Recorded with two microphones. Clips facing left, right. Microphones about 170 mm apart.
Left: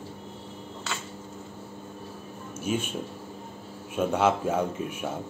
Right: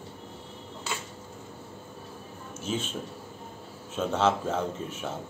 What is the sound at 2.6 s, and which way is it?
Speech, 10° left (ahead or behind).